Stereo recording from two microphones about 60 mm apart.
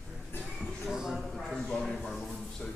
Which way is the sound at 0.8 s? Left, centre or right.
Centre.